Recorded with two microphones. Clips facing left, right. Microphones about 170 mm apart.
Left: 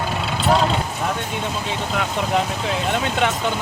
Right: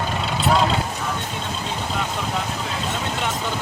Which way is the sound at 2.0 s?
80° left.